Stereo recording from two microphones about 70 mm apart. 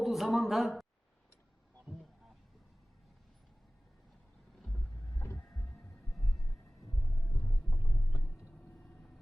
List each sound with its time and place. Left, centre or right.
0.0 s a man's voice: centre
5.1 s heart sounds: left
7.2 s heart sounds: left
7.7 s a sound: left